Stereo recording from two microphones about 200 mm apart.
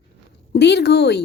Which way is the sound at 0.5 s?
55° left (ahead or behind).